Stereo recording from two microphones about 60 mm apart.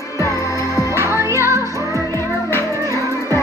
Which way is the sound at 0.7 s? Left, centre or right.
Right.